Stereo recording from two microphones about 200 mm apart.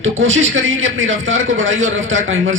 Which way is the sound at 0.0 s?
70° right (ahead or behind).